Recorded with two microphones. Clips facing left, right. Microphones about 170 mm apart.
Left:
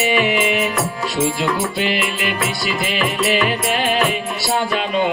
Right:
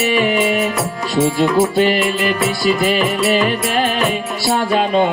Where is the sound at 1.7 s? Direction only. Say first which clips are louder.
Right 6 dB; 40° right (ahead or behind).